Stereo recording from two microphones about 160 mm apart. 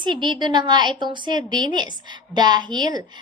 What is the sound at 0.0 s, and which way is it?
A woman's voice, 30° right (ahead or behind).